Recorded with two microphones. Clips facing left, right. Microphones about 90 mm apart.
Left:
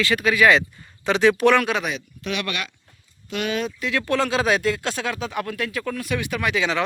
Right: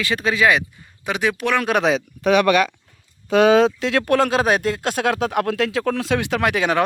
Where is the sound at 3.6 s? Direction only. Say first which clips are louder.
Right 6 dB; 75° right (ahead or behind).